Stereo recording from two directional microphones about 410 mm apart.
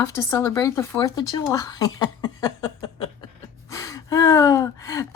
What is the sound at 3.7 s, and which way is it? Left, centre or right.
Gasp, centre.